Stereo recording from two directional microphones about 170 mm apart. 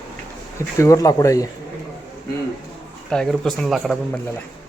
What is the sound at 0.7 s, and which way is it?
Speech, 20° left (ahead or behind).